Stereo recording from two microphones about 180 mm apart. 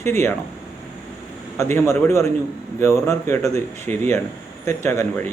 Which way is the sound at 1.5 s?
15° left (ahead or behind).